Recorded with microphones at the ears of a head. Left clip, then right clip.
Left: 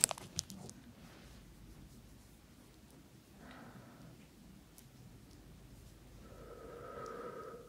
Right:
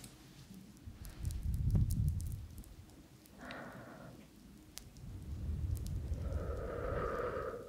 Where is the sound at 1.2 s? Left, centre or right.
Right.